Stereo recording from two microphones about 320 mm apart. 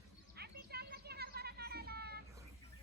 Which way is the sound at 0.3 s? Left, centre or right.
Right.